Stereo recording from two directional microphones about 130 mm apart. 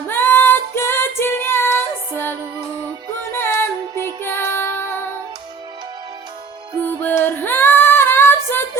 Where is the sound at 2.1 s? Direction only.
15° left (ahead or behind).